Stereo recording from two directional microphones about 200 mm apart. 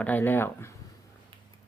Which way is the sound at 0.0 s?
10° left (ahead or behind).